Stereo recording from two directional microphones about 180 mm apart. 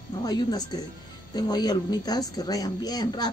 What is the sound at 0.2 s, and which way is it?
A woman's voice, 20° left (ahead or behind).